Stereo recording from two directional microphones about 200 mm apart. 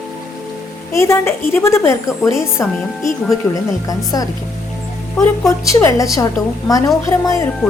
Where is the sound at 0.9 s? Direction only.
15° left (ahead or behind).